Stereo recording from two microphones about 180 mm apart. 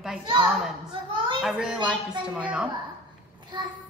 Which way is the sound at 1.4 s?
5° right (ahead or behind).